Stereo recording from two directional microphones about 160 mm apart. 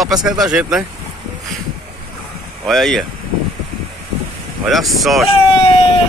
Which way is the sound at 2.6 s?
Centre (ahead or behind).